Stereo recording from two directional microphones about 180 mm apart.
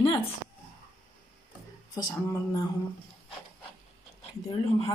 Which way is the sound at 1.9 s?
25° left (ahead or behind).